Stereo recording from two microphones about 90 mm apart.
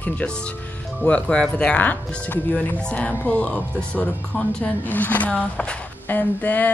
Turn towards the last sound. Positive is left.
turn(degrees=20)  # may be behind; listen again after turning